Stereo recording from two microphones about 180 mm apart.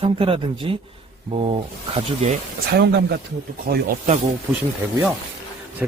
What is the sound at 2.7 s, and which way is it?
Speech, 65° right (ahead or behind).